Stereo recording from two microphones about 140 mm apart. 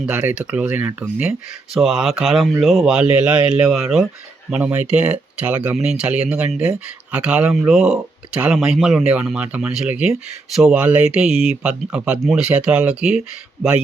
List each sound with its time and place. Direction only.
0.0 s speech: 10° right (ahead or behind)